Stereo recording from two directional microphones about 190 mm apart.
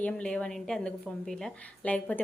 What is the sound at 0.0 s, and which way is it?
A woman's voice, 5° left (ahead or behind).